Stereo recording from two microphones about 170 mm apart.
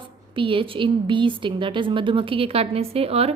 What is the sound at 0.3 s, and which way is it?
A woman's voice, 30° right (ahead or behind).